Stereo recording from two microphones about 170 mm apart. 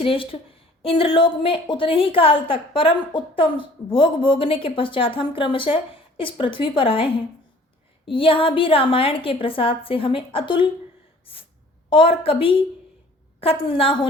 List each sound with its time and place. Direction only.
0.0 s a woman's voice: 35° left (ahead or behind)
11.9 s a woman's voice: 30° left (ahead or behind)